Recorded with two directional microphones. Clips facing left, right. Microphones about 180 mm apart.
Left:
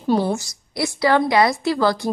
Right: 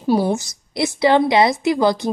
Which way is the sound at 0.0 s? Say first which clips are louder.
Right 2 dB; 10° right (ahead or behind).